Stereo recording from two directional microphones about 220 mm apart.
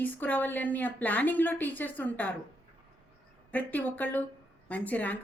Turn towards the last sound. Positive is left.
turn(degrees=5)  # may be behind; listen again after turning